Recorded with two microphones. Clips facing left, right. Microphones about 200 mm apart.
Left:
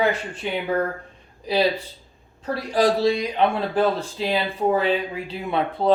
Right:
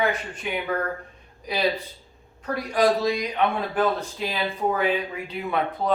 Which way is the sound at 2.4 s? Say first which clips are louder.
Left 1 dB; 30° left (ahead or behind).